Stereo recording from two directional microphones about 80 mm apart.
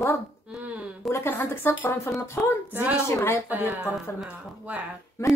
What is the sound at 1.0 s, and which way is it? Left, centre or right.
A woman's voice, left.